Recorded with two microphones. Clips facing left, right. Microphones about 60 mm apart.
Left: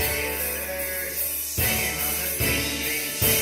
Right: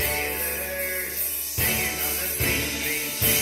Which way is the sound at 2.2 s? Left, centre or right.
Left.